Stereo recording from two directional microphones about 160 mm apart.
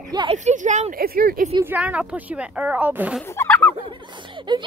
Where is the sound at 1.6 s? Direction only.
10° right (ahead or behind).